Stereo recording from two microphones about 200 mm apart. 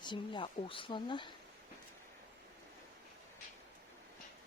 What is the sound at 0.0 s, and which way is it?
Speech, 25° left (ahead or behind).